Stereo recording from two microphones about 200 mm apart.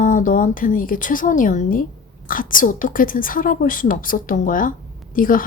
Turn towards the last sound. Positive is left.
turn(degrees=45)  # may be behind; listen again after turning